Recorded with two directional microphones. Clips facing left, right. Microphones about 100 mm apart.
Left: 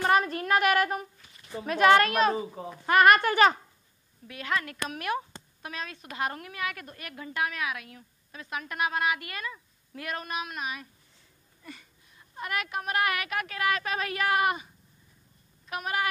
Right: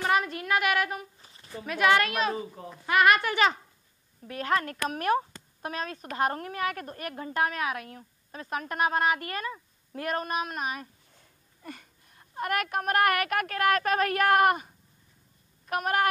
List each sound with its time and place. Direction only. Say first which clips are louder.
0.0 s child singing: left 2 dB; 40° left (ahead or behind)
1.1 s a sound: right 1 dB; 30° right (ahead or behind)
1.6 s a woman's voice: left 3 dB; 35° left (ahead or behind)
2.3 s a child's voice: left 3 dB; 15° left (ahead or behind)
2.9 s a woman's voice: left 2 dB; 45° left (ahead or behind)
4.3 s a woman's voice: right 4 dB; 40° right (ahead or behind)